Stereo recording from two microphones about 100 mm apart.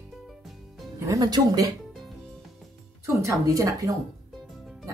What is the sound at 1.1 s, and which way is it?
Speech, 40° right (ahead or behind).